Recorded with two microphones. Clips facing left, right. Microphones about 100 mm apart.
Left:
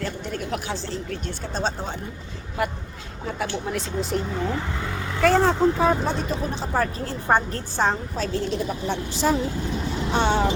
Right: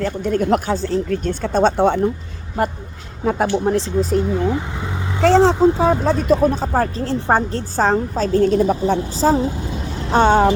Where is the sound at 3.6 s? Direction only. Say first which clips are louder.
Right 10 dB; 35° right (ahead or behind).